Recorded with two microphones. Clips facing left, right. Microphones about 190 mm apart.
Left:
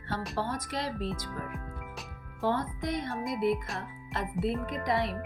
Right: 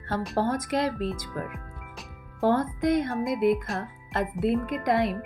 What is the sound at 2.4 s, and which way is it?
Speech, 50° right (ahead or behind).